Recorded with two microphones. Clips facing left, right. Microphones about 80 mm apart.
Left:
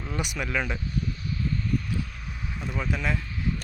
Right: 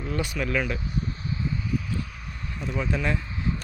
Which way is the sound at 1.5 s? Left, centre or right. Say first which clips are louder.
Left 1 dB; centre.